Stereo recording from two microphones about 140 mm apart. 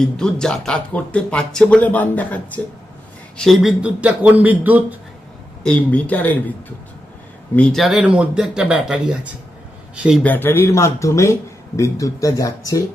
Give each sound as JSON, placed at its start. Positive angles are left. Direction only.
{"t": 0.0, "sound": "a man's voice", "side_deg": 5}
{"t": 5.6, "sound": "speech", "side_deg": 10}
{"t": 7.5, "sound": "speech", "side_deg": 5}
{"t": 10.2, "sound": "speech", "side_deg": 15}